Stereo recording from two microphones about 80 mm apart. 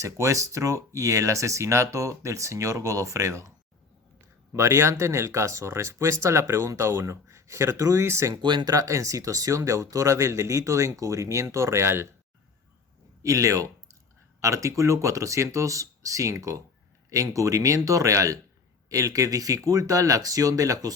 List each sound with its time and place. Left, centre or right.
0.0 s speech: right
4.5 s speech: right
8.4 s speech: right
8.7 s speech: right
13.2 s speech: right